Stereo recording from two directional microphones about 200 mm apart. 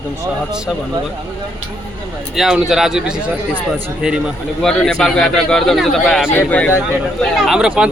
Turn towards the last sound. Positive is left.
turn(degrees=-5)  # may be behind; listen again after turning